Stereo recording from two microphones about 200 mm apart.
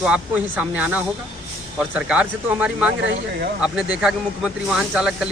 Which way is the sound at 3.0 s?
50° right (ahead or behind).